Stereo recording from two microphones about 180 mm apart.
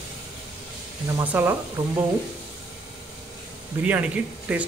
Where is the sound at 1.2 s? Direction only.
10° right (ahead or behind).